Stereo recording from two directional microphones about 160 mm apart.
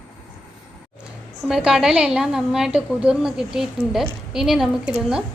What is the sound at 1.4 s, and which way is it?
A woman's voice, 5° right (ahead or behind).